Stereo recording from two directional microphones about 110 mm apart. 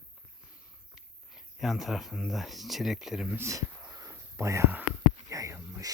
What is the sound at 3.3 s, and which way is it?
Speech, 25° right (ahead or behind).